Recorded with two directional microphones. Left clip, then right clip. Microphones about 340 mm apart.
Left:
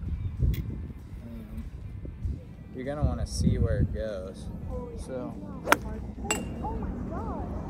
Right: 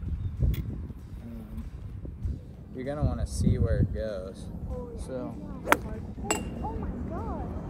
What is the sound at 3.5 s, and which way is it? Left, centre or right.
Speech, centre.